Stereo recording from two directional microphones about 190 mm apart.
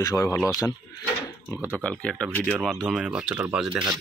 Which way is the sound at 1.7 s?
5° left (ahead or behind).